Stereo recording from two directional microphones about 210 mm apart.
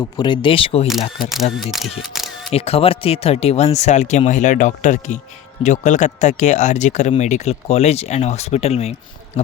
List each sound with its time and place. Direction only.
0.2 s speech: 25° left (ahead or behind)
1.7 s camera: centre (ahead or behind)
2.5 s speech: 30° left (ahead or behind)